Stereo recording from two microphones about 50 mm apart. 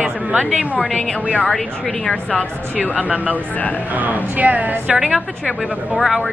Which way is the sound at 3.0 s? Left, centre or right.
Right.